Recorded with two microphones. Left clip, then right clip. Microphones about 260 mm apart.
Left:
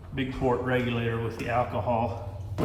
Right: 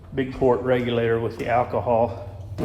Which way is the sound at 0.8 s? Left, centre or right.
Left.